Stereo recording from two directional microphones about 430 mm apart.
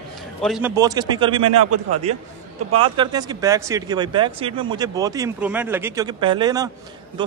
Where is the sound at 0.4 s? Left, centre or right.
Centre.